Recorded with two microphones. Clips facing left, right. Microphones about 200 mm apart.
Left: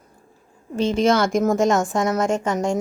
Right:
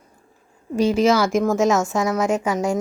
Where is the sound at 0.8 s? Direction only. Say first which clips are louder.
Right 1 dB; 5° right (ahead or behind).